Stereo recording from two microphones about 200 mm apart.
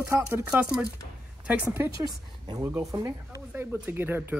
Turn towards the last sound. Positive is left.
turn(degrees=-10)  # may be behind; listen again after turning